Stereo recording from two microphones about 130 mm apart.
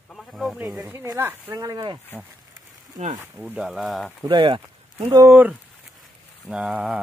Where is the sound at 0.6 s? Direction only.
15° right (ahead or behind); by 2.0 s 30° right (ahead or behind).